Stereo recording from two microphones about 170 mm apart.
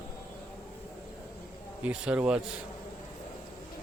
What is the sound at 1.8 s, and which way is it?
Speech, 10° right (ahead or behind).